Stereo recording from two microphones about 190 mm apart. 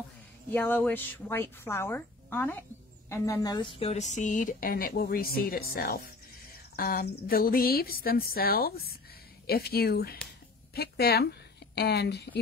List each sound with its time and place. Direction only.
0.5 s speech: 10° left (ahead or behind); by 12.3 s 60° left (ahead or behind)